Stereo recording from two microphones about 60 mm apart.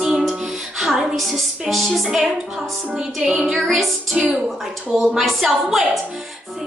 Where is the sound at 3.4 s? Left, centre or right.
Centre.